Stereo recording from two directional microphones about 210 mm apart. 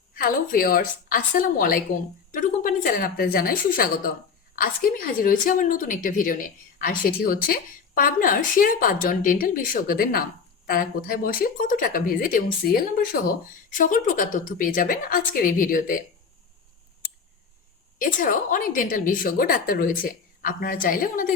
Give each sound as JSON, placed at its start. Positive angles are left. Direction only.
{"t": 0.1, "sound": "a woman's voice", "side_deg": 45}
{"t": 18.0, "sound": "a woman's voice", "side_deg": 40}